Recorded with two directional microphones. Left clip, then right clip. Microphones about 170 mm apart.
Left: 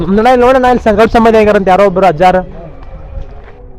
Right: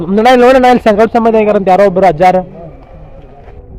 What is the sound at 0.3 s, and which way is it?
Speech, 20° right (ahead or behind).